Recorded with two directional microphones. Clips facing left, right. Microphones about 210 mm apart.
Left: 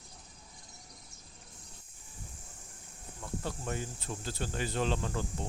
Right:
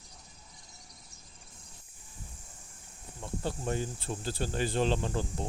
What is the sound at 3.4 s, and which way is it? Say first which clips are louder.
Speech: right 5 dB; 30° right (ahead or behind).